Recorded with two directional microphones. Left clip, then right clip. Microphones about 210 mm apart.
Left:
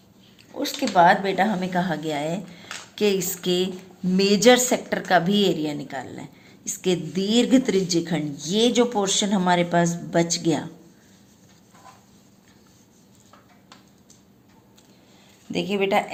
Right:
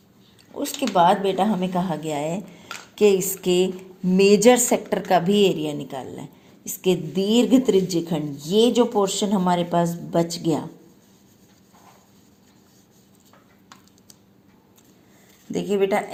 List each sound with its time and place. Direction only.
0.5 s speech: 20° right (ahead or behind)
1.2 s a woman's voice: 10° left (ahead or behind)
1.5 s a woman's voice: 15° right (ahead or behind)
2.9 s a sound: 15° right (ahead or behind)
4.2 s a woman's voice: 15° right (ahead or behind)
5.2 s a woman's voice: 20° left (ahead or behind)
5.5 s a woman's voice: 20° right (ahead or behind)
15.5 s a woman's voice: 15° right (ahead or behind)